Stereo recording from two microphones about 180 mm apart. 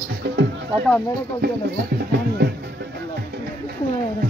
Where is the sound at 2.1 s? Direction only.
65° right (ahead or behind).